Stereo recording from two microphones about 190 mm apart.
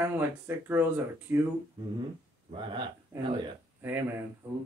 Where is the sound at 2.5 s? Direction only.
25° right (ahead or behind).